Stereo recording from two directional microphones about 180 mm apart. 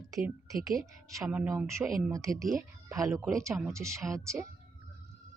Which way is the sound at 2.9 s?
20° right (ahead or behind).